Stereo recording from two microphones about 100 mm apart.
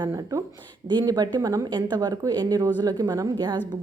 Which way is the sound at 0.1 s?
30° right (ahead or behind).